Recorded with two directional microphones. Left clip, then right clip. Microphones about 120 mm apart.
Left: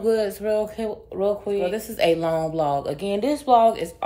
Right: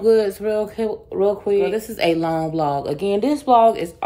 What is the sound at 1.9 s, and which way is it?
A woman's voice, 5° right (ahead or behind).